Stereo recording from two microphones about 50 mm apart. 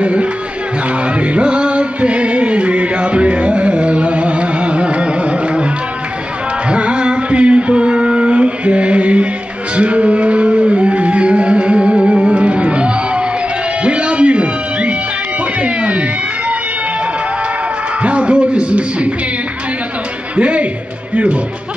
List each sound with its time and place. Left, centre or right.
0.0 s music: right
6.7 s a sound: right
9.8 s music: right
15.6 s cat: right
18.0 s music: right
20.3 s music: right